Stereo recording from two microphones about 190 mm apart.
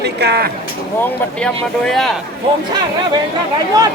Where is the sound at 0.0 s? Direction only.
60° right (ahead or behind).